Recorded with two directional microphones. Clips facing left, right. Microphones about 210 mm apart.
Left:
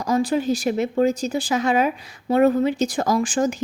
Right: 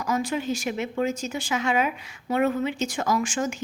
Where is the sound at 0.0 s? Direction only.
35° left (ahead or behind).